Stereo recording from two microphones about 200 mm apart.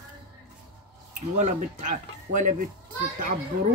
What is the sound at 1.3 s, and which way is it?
Speech, 35° right (ahead or behind).